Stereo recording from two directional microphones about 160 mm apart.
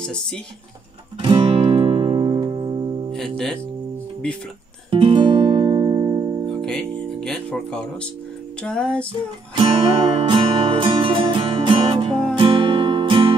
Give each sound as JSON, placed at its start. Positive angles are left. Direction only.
{"t": 0.0, "sound": "speech", "side_deg": 5}
{"t": 1.2, "sound": "music", "side_deg": -35}
{"t": 4.9, "sound": "guitar", "side_deg": -30}
{"t": 6.5, "sound": "music", "side_deg": 5}
{"t": 9.6, "sound": "music", "side_deg": -35}